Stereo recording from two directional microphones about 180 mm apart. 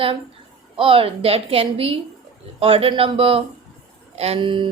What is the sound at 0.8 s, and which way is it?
A woman's voice, 30° right (ahead or behind).